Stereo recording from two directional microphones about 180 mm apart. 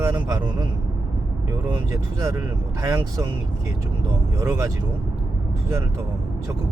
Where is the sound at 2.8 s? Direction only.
20° right (ahead or behind).